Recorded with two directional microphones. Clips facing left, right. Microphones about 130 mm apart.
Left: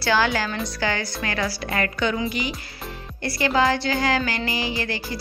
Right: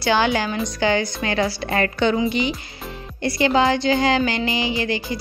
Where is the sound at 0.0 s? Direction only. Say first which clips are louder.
Right 2 dB; 20° right (ahead or behind).